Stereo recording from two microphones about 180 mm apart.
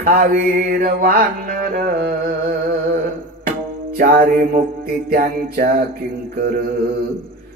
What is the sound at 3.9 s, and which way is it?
Mantra, 55° right (ahead or behind).